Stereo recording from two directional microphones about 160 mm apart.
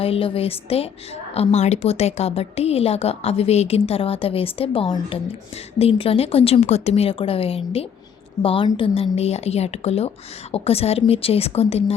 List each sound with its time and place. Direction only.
0.0 s a woman's voice: 35° left (ahead or behind)